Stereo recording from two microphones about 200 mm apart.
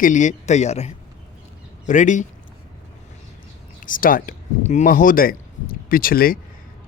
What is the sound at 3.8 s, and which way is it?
A man's voice, 45° left (ahead or behind).